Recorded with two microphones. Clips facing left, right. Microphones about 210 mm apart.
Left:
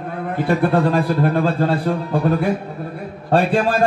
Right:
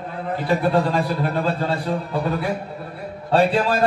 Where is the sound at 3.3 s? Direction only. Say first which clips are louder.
Left 1 dB; 50° left (ahead or behind).